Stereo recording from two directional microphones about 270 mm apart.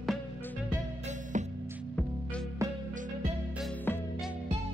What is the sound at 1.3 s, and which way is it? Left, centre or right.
Music, right.